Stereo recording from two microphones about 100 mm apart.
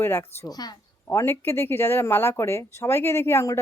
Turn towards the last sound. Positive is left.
turn(degrees=25)  # may be behind; listen again after turning